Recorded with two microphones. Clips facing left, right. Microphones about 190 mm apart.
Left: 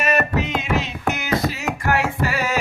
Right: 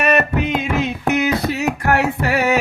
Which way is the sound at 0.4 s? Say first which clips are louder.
Right 4 dB; 55° right (ahead or behind).